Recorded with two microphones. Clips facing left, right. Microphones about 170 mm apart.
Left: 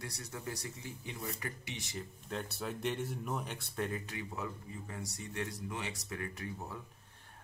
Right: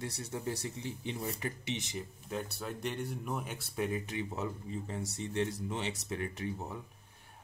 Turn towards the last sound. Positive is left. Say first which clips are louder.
# right 4 dB
turn(degrees=-20)  # may be behind; listen again after turning